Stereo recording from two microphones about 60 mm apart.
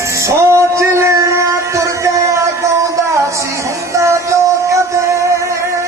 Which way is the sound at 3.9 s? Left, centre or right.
Right.